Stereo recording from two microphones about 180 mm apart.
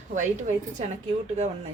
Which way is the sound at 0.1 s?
45° right (ahead or behind).